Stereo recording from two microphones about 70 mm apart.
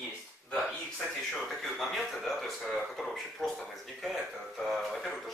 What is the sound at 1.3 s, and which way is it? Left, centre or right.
Speech, centre.